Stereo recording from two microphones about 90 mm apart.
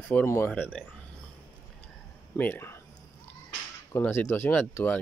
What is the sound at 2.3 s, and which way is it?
Speech, 20° left (ahead or behind).